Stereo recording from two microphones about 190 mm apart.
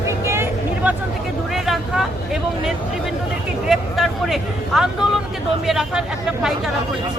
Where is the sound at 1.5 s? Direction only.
Centre (ahead or behind).